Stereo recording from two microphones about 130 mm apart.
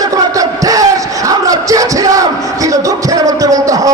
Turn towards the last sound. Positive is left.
turn(degrees=-25)  # may be behind; listen again after turning